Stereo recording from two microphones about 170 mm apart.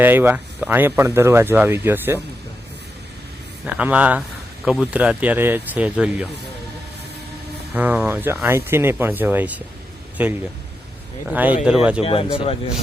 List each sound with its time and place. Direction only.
0.0 s speech: 10° right (ahead or behind)
3.7 s speech: 10° right (ahead or behind)
7.7 s speech: 10° right (ahead or behind)
12.0 s speech: 35° left (ahead or behind)